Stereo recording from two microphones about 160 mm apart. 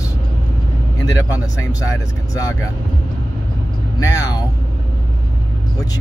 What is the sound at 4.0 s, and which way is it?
Speech, 20° left (ahead or behind).